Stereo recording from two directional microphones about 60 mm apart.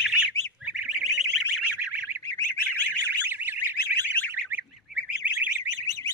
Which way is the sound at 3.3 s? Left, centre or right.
Right.